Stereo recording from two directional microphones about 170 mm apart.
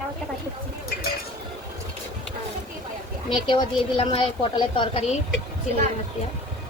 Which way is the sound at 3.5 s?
30° left (ahead or behind).